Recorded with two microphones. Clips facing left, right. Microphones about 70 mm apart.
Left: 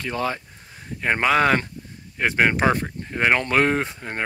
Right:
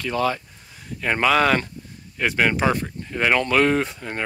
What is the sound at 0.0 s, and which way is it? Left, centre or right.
Speech, left.